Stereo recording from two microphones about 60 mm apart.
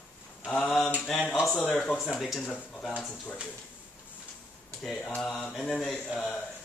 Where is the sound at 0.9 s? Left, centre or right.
Left.